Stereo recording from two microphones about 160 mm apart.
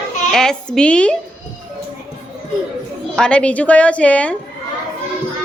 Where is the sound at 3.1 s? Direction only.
5° left (ahead or behind).